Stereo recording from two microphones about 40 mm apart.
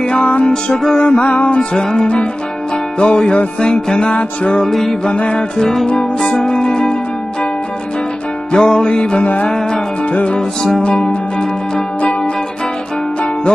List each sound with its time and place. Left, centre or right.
0.0 s music: left
0.5 s music: centre
1.2 s music: left
3.0 s music: left
4.6 s music: centre
5.1 s music: left
5.6 s music: centre
5.9 s music: left
8.5 s music: centre
9.2 s music: left
10.8 s music: left